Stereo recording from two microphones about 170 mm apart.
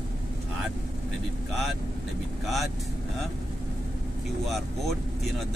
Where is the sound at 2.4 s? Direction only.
Centre (ahead or behind).